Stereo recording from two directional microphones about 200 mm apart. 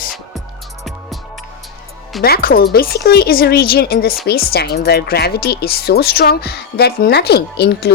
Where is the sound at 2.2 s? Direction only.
50° left (ahead or behind).